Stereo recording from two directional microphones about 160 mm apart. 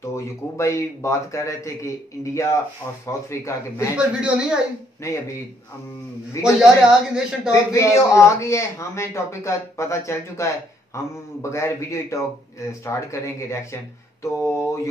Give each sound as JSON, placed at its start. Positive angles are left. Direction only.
{"t": 0.0, "sound": "a man's voice", "side_deg": 20}
{"t": 4.2, "sound": "speech", "side_deg": -5}
{"t": 5.0, "sound": "speech", "side_deg": 20}
{"t": 6.4, "sound": "speech", "side_deg": -5}
{"t": 7.7, "sound": "a man's voice", "side_deg": 20}
{"t": 11.5, "sound": "a man's voice", "side_deg": 20}